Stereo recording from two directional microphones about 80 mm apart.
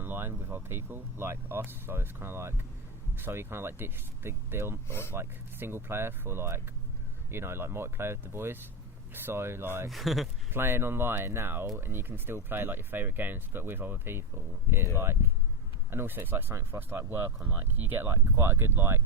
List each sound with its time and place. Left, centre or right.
0.0 s speech: right
4.9 s speech: left
5.1 s speech: right
9.9 s speech: centre
10.5 s speech: right